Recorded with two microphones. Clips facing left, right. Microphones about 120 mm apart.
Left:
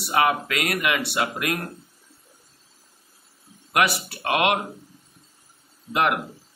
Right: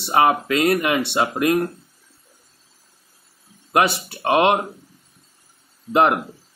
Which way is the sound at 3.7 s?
25° right (ahead or behind).